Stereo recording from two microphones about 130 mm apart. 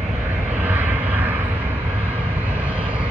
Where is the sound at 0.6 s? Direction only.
15° right (ahead or behind).